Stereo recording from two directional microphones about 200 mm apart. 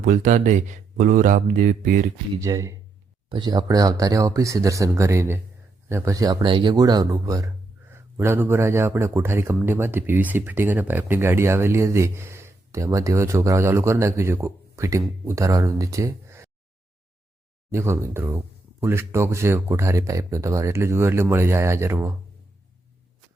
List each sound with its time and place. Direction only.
0.0 s speech: 40° right (ahead or behind)
2.4 s speech: 15° right (ahead or behind)
17.7 s speech: 15° right (ahead or behind)